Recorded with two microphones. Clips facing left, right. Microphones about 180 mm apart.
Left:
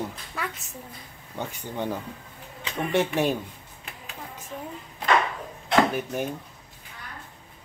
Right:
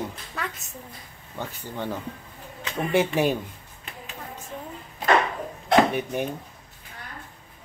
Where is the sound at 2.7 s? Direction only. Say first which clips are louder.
Right 2 dB; centre (ahead or behind).